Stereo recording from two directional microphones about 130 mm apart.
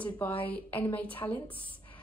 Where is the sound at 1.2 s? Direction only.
25° left (ahead or behind).